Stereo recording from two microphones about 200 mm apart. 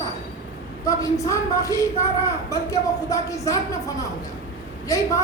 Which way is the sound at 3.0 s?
15° left (ahead or behind).